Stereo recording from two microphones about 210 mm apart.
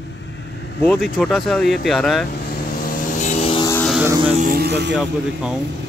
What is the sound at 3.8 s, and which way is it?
Vehicle, 5° right (ahead or behind).